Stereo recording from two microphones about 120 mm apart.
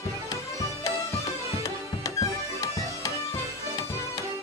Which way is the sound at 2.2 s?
30° left (ahead or behind).